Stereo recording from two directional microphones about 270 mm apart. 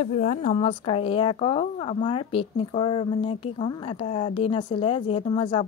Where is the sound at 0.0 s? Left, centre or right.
Left.